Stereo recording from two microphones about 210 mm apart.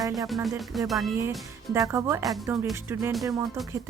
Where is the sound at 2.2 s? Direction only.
Centre (ahead or behind).